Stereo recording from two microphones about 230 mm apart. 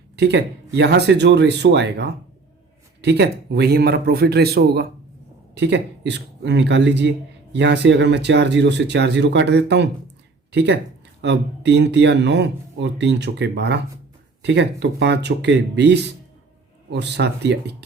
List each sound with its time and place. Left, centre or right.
0.2 s speech: right